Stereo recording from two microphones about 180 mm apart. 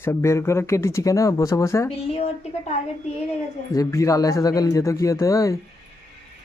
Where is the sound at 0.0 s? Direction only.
15° left (ahead or behind).